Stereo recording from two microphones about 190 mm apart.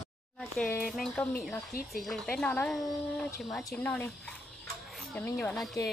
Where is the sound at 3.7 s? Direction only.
10° left (ahead or behind).